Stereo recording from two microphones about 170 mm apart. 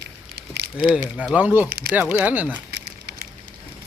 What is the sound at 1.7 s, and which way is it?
Speech, 60° right (ahead or behind).